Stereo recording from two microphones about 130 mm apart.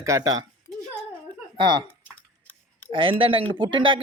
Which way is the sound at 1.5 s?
35° right (ahead or behind).